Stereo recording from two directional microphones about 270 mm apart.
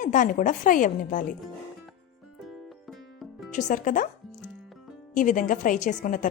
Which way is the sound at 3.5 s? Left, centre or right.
Left.